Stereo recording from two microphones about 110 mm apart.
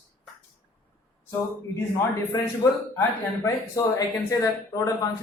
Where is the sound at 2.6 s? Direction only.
35° left (ahead or behind).